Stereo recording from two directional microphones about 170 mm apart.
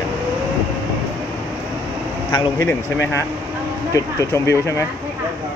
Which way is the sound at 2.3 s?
15° left (ahead or behind).